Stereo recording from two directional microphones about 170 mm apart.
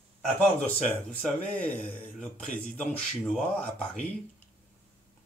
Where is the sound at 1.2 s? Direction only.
5° left (ahead or behind).